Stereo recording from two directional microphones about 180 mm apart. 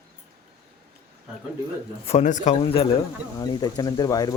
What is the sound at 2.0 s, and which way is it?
A man's voice, 40° left (ahead or behind).